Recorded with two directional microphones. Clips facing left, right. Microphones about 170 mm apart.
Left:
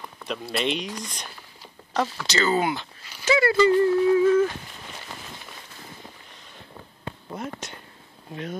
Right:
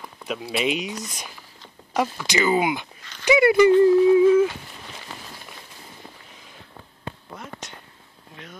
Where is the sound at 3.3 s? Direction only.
15° right (ahead or behind).